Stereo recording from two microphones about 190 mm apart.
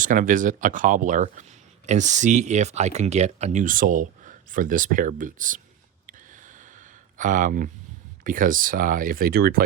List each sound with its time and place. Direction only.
0.0 s speech: 45° right (ahead or behind)
6.1 s a sound: 45° right (ahead or behind)
8.2 s speech: 45° right (ahead or behind)